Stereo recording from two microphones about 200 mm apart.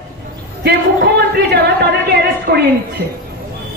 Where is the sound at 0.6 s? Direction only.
55° right (ahead or behind).